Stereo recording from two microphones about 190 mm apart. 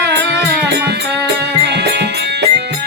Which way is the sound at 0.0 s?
65° right (ahead or behind).